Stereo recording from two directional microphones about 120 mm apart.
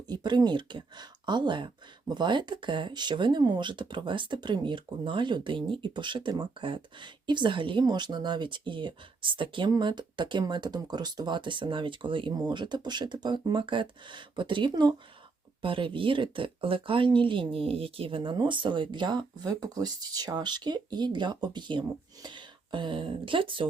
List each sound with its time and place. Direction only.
0.1 s speech: 40° right (ahead or behind)